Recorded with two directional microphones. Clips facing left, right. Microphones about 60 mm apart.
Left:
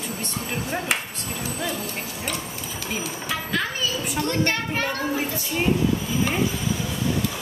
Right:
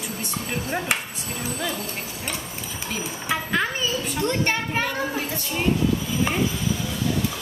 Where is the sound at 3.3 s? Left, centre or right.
Right.